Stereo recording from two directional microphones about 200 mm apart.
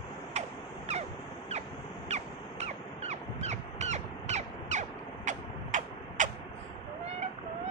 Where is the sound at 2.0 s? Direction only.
35° right (ahead or behind).